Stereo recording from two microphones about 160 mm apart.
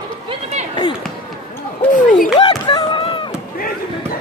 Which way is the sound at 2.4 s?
30° left (ahead or behind).